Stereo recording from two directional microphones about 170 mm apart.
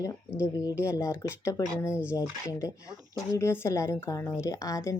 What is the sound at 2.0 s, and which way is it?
Speech, 5° right (ahead or behind).